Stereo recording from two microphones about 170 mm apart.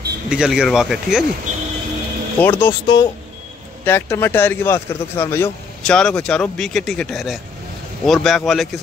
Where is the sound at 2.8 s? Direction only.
25° left (ahead or behind).